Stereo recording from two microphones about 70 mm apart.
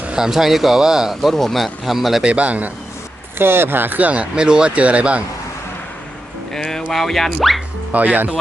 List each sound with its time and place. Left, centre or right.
0.0 s a sound: centre
0.3 s speech: centre
1.3 s speech: centre
2.2 s speech: centre
3.3 s speech: right; by 5.2 s centre
6.5 s a sound: centre
6.9 s speech: centre
7.9 s speech: right